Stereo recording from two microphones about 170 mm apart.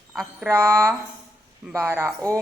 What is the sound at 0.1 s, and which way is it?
Speech, centre (ahead or behind).